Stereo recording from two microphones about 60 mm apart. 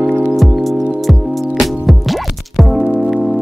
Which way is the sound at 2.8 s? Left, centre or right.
Centre.